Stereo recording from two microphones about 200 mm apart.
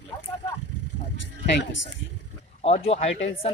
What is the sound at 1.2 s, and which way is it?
Speech, 60° left (ahead or behind).